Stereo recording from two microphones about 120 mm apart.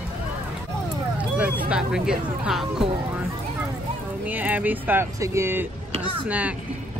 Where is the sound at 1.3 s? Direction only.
10° right (ahead or behind).